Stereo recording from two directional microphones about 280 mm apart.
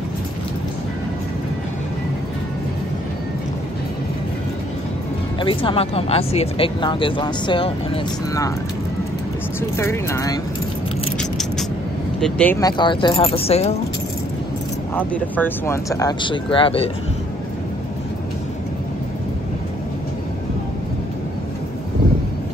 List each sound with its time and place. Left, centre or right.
5.4 s speech: centre
9.6 s speech: centre
11.1 s mechanisms: centre
12.2 s speech: centre; by 13.7 s left
15.0 s speech: centre